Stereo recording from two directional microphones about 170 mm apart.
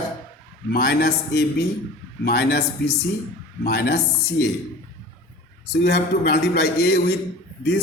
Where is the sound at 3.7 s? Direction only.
75° left (ahead or behind).